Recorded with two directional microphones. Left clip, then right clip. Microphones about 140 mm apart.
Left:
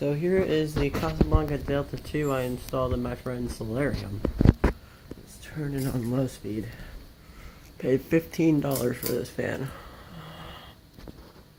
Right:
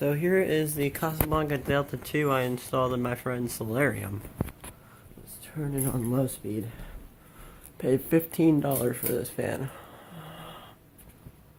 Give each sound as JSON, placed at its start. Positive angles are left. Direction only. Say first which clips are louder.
{"t": 0.0, "sound": "speech", "louder": "even", "side_deg": -5}
{"t": 5.5, "sound": "speech", "louder": "even", "side_deg": -15}
{"t": 7.8, "sound": "speech", "louder": "even", "side_deg": -25}
{"t": 8.7, "sound": "speech", "louder": "left 1 dB", "side_deg": -5}
{"t": 9.3, "sound": "a sound", "louder": "left 1 dB", "side_deg": -5}